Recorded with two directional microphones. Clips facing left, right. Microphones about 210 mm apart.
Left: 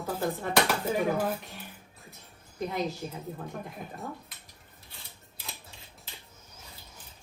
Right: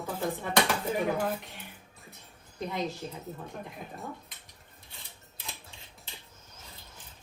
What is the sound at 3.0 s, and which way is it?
Speech, 10° left (ahead or behind).